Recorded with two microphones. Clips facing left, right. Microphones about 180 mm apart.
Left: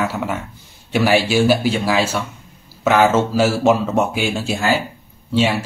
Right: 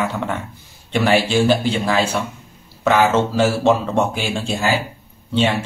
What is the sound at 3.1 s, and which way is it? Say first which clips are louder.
A man's voice: left 1 dB; 5° left (ahead or behind).